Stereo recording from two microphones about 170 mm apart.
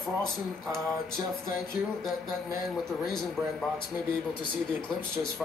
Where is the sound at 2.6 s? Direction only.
5° left (ahead or behind).